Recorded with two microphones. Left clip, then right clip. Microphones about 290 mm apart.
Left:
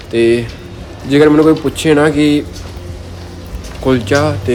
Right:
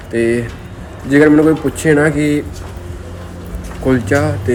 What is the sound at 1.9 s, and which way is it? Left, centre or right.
Speech, centre.